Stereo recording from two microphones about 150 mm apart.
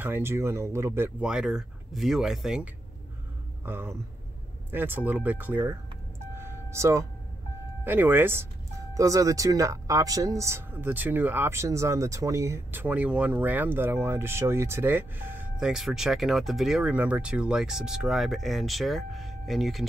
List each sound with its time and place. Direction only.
0.0 s speech: 15° right (ahead or behind)
3.6 s speech: 15° right (ahead or behind)
6.3 s a sound: 15° right (ahead or behind)
7.8 s speech: 15° right (ahead or behind)